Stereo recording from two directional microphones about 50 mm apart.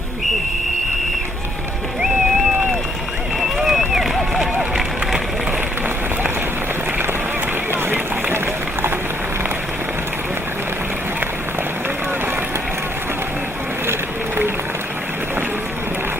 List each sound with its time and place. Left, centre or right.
3.6 s run: centre